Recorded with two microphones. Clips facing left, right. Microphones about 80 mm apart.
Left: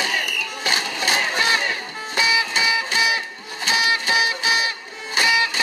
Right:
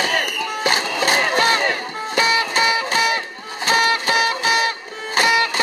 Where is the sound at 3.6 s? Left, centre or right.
Right.